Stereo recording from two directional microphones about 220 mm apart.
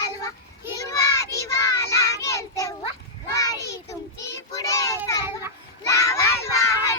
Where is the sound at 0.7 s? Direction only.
15° left (ahead or behind).